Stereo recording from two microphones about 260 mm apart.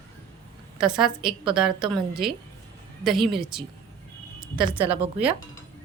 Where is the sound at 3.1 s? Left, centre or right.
Centre.